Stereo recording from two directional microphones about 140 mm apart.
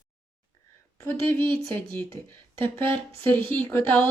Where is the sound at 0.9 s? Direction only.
15° left (ahead or behind).